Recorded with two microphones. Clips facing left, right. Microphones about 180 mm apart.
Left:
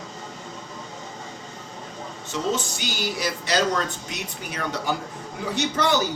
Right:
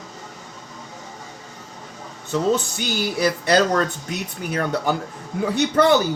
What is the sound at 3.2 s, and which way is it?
Speech, 60° right (ahead or behind).